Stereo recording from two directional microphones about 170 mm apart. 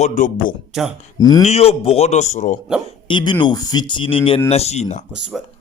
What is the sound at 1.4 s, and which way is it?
Speech, 35° left (ahead or behind).